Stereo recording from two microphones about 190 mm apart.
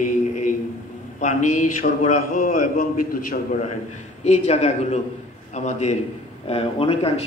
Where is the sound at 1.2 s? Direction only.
40° left (ahead or behind).